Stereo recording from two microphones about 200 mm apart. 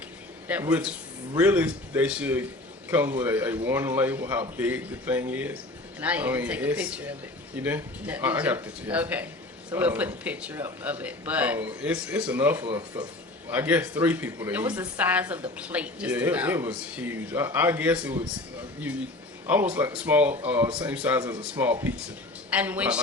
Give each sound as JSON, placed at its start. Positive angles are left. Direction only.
{"t": 0.4, "sound": "speech", "side_deg": -10}
{"t": 19.5, "sound": "speech", "side_deg": -10}